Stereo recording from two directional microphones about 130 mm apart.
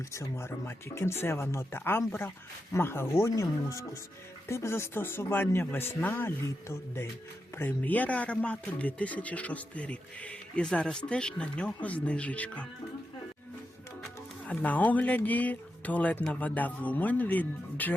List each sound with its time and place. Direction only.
0.1 s speech: 20° left (ahead or behind)
14.4 s speech: 10° left (ahead or behind)